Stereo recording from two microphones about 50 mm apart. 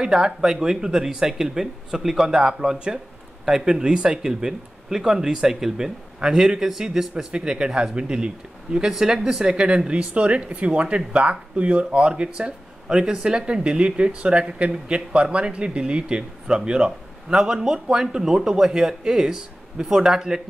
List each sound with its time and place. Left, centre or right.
0.0 s speech: centre